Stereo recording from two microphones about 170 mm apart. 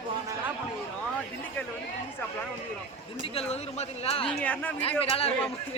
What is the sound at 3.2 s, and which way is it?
Speech, 35° left (ahead or behind).